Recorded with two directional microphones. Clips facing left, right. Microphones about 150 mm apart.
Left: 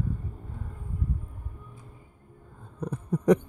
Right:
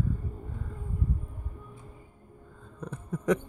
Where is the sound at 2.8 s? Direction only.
35° left (ahead or behind).